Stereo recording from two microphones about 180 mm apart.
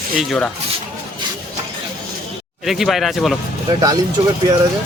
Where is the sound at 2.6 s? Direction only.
Centre (ahead or behind).